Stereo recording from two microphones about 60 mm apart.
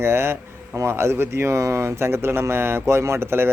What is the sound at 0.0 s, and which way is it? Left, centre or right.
Speech, right.